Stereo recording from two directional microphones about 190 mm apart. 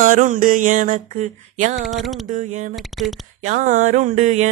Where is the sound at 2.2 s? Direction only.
40° right (ahead or behind).